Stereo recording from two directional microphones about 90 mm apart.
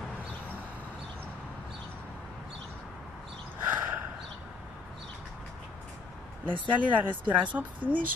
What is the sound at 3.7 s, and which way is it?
Snort, 20° right (ahead or behind).